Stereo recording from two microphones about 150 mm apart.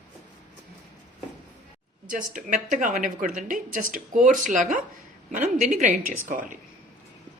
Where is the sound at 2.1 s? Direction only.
60° right (ahead or behind).